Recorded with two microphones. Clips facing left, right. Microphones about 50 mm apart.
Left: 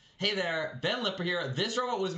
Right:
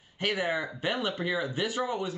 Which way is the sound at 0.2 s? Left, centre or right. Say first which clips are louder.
Right 2 dB; centre.